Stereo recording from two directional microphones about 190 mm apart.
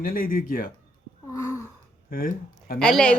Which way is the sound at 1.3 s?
15° left (ahead or behind).